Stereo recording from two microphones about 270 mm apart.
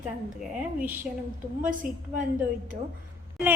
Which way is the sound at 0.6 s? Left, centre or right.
Centre.